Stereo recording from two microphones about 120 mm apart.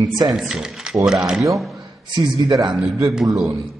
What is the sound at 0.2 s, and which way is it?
Speech, 5° right (ahead or behind).